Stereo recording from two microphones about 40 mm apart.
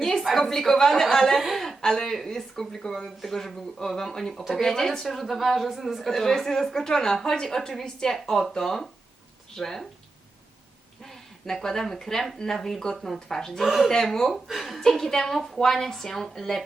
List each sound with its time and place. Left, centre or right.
0.0 s a sound: centre
0.3 s a woman's voice: centre
1.4 s a woman's voice: centre
1.8 s a woman's voice: centre
6.1 s a woman's voice: centre
8.1 s a woman's voice: centre
11.0 s a woman's voice: centre
13.7 s a woman's voice: centre
13.9 s a woman's voice: centre